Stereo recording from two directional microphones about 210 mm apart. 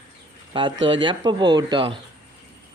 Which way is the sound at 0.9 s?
25° right (ahead or behind).